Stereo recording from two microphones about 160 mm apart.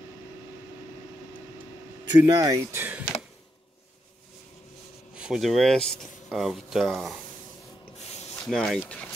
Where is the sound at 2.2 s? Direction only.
20° right (ahead or behind).